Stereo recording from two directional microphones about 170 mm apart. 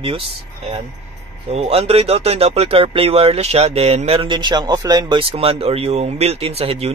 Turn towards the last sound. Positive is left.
turn(degrees=-35)  # may be behind; listen again after turning